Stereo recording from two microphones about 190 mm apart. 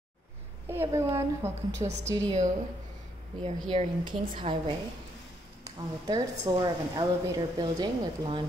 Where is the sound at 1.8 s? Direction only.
35° right (ahead or behind).